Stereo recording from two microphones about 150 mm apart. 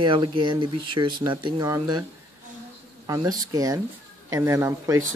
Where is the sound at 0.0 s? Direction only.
35° right (ahead or behind).